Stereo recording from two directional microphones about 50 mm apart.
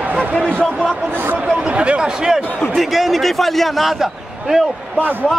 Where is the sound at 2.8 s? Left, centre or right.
Centre.